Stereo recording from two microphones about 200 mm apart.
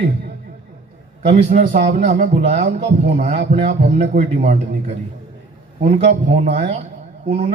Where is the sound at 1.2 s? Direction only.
35° right (ahead or behind).